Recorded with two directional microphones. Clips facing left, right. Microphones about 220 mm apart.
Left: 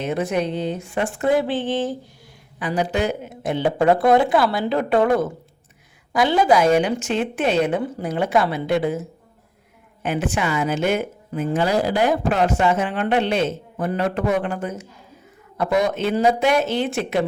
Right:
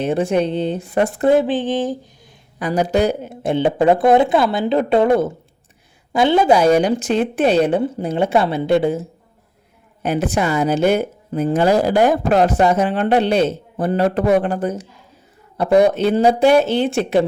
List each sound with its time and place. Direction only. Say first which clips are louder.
0.0 s speech: right 5 dB; 30° right (ahead or behind)
1.3 s a sound: right 3 dB; 20° right (ahead or behind)
2.6 s speech: right 5 dB; 40° right (ahead or behind)
10.0 s speech: right 4 dB; 40° right (ahead or behind)